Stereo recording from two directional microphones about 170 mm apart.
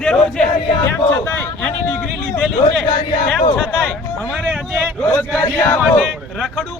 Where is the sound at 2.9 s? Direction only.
30° left (ahead or behind).